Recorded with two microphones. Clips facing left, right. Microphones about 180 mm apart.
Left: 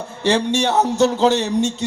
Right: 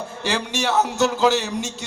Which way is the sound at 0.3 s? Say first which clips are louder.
Left 6 dB; 30° left (ahead or behind).